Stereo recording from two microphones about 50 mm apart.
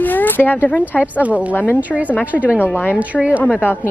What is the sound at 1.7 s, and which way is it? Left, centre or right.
Speech, right.